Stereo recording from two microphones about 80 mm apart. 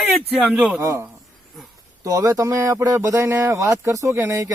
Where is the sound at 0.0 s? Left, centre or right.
Centre.